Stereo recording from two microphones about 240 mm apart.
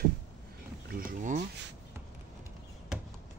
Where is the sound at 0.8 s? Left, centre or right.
Right.